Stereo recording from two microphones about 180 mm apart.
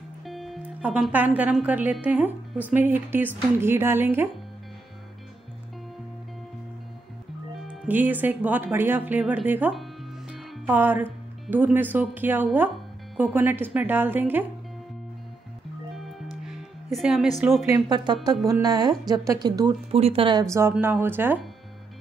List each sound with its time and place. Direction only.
0.2 s speech: centre (ahead or behind)
7.6 s speech: 10° right (ahead or behind)
10.3 s music: 5° right (ahead or behind)
11.5 s speech: 10° right (ahead or behind)
16.4 s music: centre (ahead or behind)
17.6 s a woman's voice: 25° right (ahead or behind)
20.4 s speech: 15° right (ahead or behind)